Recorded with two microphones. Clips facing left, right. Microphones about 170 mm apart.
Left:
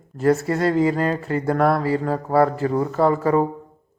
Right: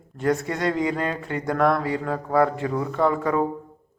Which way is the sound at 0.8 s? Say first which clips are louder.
Left 5 dB; 35° left (ahead or behind).